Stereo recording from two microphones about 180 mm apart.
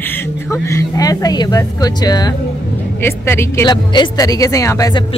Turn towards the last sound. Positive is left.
turn(degrees=20)  # may be behind; listen again after turning